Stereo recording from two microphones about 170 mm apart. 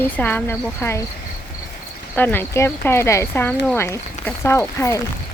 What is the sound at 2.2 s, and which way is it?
Speech, 10° left (ahead or behind).